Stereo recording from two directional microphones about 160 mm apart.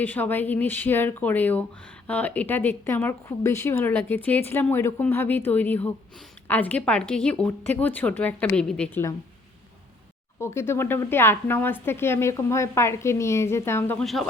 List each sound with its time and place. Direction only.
0.0 s a woman's voice: 10° left (ahead or behind)
10.4 s a woman's voice: 15° left (ahead or behind)
14.0 s speech: centre (ahead or behind)